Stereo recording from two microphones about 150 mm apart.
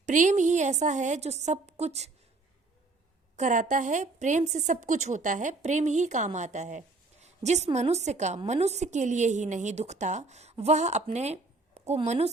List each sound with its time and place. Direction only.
0.0 s a woman's voice: 55° right (ahead or behind)
3.3 s a woman's voice: 55° right (ahead or behind)